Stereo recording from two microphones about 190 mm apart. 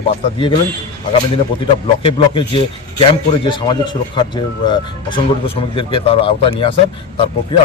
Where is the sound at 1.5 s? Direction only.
25° left (ahead or behind).